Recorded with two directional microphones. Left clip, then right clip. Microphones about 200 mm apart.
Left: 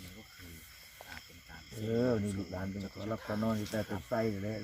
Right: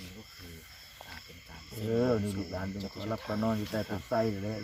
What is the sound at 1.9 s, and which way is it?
Speech, 25° left (ahead or behind).